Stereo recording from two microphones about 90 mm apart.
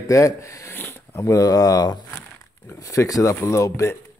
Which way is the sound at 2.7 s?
35° left (ahead or behind).